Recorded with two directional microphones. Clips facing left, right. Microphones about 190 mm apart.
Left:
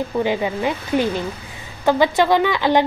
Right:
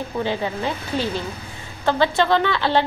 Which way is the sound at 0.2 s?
15° left (ahead or behind).